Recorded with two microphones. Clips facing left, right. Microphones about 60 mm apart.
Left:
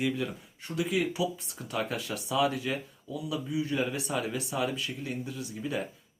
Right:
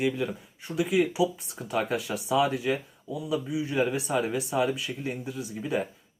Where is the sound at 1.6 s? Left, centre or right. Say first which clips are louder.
Right 5 dB; centre.